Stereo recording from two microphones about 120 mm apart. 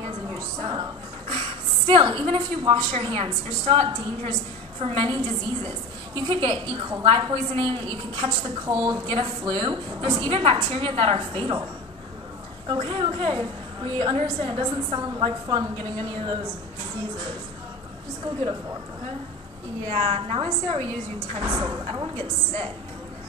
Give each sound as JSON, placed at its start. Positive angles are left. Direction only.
{"t": 0.6, "sound": "a sound", "side_deg": -40}
{"t": 1.9, "sound": "a woman's voice", "side_deg": -45}
{"t": 8.6, "sound": "a woman's voice", "side_deg": -35}
{"t": 12.6, "sound": "a woman's voice", "side_deg": -45}
{"t": 19.9, "sound": "a woman's voice", "side_deg": -50}
{"t": 21.4, "sound": "a woman's voice", "side_deg": -35}